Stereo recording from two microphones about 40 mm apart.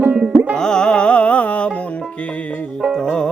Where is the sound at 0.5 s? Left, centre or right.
Centre.